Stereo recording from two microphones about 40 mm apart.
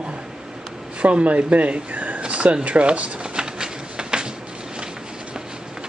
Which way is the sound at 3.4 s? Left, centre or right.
Centre.